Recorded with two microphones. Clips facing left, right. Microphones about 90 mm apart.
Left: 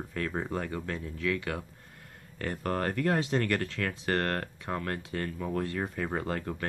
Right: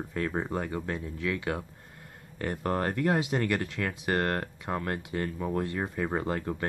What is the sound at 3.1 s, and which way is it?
Speech, 15° right (ahead or behind).